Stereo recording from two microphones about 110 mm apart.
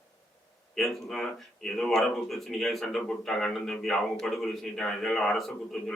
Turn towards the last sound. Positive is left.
turn(degrees=5)  # may be behind; listen again after turning